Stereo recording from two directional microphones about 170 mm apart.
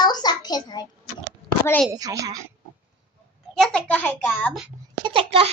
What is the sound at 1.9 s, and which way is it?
Speech, 20° right (ahead or behind).